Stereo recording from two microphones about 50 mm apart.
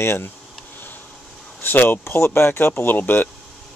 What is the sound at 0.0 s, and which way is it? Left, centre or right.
Speech, left.